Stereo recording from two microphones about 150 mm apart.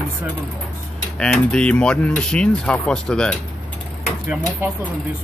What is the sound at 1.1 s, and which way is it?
Speech, 5° left (ahead or behind).